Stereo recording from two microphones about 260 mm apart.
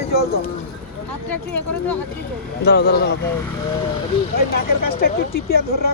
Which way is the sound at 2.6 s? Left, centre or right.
Left.